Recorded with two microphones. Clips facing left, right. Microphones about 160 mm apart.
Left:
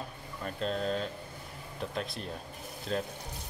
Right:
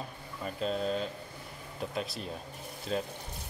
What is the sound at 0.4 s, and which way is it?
Speech, 5° right (ahead or behind).